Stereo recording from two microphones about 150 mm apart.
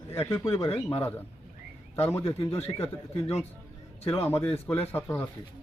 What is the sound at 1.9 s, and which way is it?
Speech, 15° left (ahead or behind).